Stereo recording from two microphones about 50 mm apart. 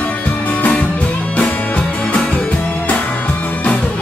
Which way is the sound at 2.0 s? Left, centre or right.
Left.